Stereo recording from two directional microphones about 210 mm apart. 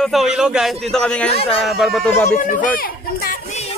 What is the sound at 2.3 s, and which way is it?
A child's voice, 40° left (ahead or behind).